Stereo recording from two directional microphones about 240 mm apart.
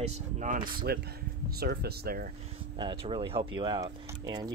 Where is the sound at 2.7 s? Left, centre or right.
Right.